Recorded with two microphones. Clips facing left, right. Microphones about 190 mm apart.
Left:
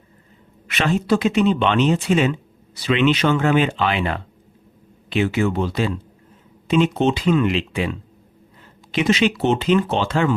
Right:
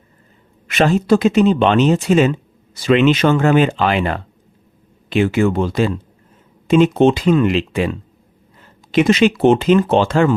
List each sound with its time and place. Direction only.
0.7 s speech: 45° right (ahead or behind)